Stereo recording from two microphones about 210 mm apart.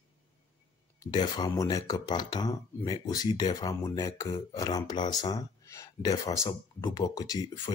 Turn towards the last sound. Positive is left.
turn(degrees=15)  # may be behind; listen again after turning